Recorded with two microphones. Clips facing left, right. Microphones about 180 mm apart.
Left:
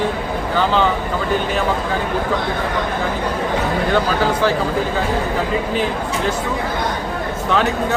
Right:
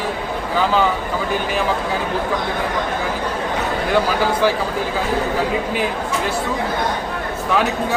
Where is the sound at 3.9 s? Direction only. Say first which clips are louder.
Right 1 dB; 10° right (ahead or behind).